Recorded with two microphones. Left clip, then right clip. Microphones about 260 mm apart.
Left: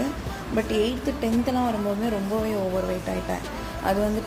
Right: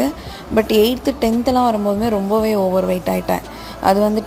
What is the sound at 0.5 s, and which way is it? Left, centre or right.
A woman's voice, right.